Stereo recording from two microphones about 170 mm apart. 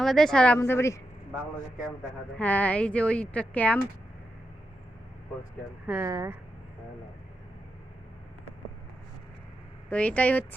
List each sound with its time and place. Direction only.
0.0 s speech: centre (ahead or behind)
2.4 s speech: 10° left (ahead or behind)
5.8 s speech: 10° right (ahead or behind)
6.1 s speech: 20° right (ahead or behind)
9.9 s speech: 10° left (ahead or behind)